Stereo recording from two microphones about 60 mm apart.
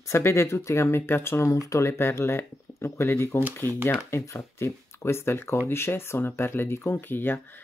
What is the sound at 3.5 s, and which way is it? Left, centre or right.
Speech, left.